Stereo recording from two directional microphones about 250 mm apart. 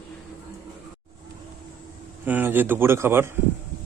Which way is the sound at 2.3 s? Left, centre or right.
Centre.